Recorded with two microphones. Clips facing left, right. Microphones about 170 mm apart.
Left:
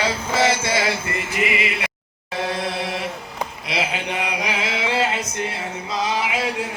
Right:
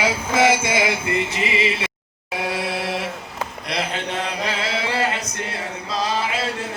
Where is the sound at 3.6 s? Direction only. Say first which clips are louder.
Left 1 dB; 5° left (ahead or behind); by 5.2 s 20° left (ahead or behind).